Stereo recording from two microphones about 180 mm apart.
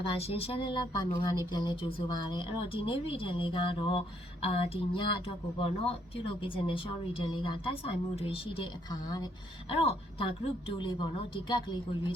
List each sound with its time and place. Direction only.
0.0 s speech: 30° left (ahead or behind)
11.4 s speech: 25° left (ahead or behind)